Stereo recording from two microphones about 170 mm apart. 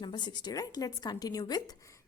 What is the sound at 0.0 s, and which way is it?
A woman's voice, 25° left (ahead or behind).